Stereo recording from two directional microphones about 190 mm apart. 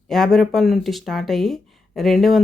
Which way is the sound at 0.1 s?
Centre (ahead or behind).